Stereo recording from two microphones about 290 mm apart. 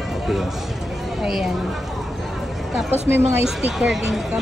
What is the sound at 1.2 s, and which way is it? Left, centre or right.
Speech, centre.